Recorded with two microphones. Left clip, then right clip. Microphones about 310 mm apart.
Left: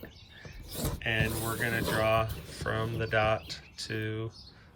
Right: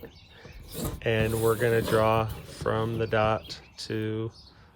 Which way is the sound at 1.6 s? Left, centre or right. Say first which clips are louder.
Right 2 dB; centre.